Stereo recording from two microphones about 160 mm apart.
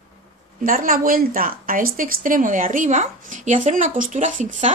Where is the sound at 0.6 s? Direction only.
60° right (ahead or behind).